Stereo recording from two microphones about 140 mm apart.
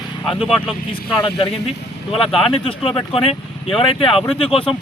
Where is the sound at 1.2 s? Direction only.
40° left (ahead or behind).